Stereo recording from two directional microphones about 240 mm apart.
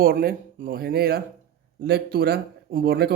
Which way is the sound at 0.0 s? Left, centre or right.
Right.